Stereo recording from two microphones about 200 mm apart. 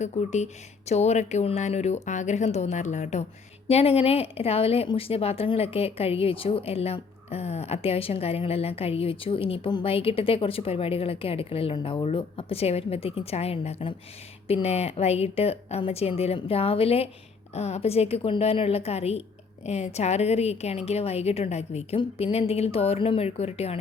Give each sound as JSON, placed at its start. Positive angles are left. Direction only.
{"t": 0.0, "sound": "a woman's voice", "side_deg": 35}